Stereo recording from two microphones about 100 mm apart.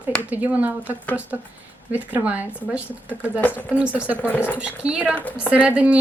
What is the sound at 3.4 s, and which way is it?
Speech, 20° left (ahead or behind).